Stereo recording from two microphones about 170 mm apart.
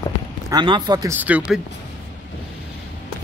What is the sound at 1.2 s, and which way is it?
Speech, 10° right (ahead or behind).